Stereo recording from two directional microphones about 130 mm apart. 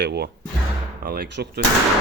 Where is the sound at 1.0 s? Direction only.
90° right.